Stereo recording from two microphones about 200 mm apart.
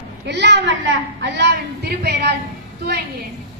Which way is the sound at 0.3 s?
60° right (ahead or behind).